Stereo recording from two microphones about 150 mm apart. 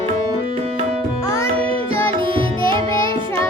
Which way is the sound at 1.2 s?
20° left (ahead or behind).